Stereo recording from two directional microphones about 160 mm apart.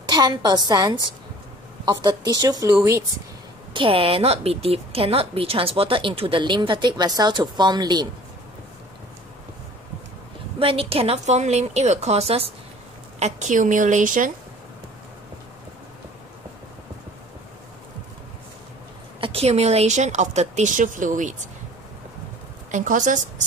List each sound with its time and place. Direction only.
0.1 s a woman's voice: 25° right (ahead or behind)
3.7 s speech: 35° right (ahead or behind)
10.6 s speech: 35° right (ahead or behind)
13.2 s speech: 50° right (ahead or behind)
19.1 s speech: 35° right (ahead or behind); by 21.4 s 50° right (ahead or behind)
22.7 s a woman's voice: 50° right (ahead or behind)